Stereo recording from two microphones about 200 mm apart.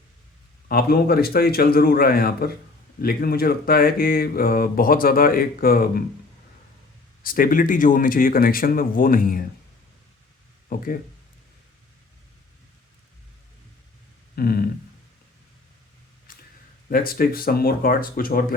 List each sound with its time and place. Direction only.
0.7 s speech: 50° left (ahead or behind)
7.2 s speech: 45° left (ahead or behind)
10.7 s speech: 45° left (ahead or behind)
14.3 s speech: 50° left (ahead or behind)
16.3 s a sound: 45° left (ahead or behind)
16.9 s speech: 45° left (ahead or behind)